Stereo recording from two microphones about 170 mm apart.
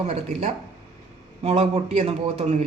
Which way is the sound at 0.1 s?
45° right (ahead or behind).